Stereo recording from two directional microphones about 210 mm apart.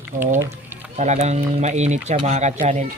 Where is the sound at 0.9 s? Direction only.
35° right (ahead or behind).